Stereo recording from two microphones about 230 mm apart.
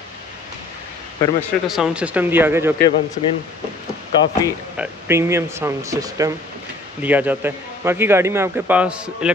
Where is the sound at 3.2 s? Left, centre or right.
Left.